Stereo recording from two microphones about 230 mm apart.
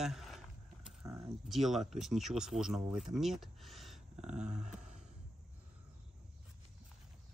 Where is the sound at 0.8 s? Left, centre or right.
Centre.